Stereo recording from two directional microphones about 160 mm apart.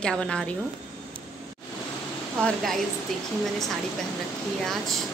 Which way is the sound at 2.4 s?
5° left (ahead or behind).